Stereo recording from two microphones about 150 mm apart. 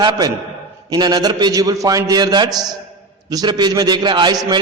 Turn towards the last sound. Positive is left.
turn(degrees=-30)  # may be behind; listen again after turning